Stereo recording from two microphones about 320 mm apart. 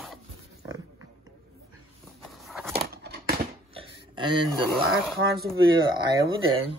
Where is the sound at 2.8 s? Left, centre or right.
Right.